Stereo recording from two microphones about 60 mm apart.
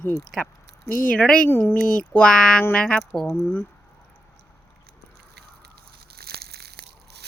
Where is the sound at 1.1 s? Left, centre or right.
Centre.